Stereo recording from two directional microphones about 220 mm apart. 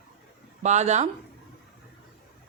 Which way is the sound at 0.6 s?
30° right (ahead or behind).